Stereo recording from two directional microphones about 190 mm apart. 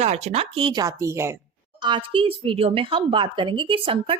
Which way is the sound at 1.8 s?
25° right (ahead or behind).